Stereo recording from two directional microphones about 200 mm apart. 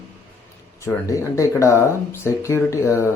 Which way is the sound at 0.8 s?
15° left (ahead or behind).